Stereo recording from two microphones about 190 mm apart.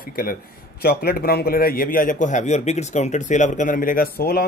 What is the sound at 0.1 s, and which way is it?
Speech, 50° left (ahead or behind).